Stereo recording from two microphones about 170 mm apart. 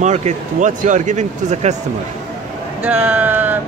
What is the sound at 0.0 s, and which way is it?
Speech, 45° right (ahead or behind).